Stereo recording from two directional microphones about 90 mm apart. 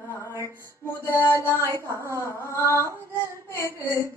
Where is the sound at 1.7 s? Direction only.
35° right (ahead or behind).